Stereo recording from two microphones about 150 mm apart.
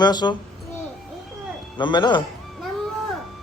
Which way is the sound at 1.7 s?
30° left (ahead or behind).